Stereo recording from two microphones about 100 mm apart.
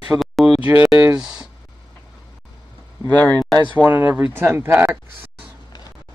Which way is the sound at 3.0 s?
15° left (ahead or behind).